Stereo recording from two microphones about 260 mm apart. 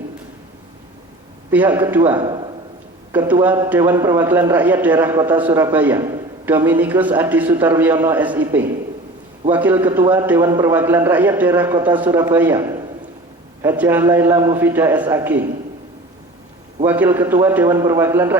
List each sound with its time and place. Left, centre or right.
1.5 s a man's voice: centre
16.8 s a man's voice: centre